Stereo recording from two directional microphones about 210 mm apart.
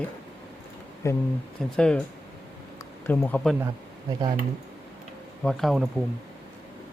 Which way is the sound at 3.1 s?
10° left (ahead or behind).